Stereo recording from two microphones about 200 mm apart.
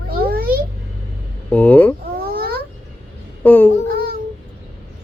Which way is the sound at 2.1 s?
50° right (ahead or behind).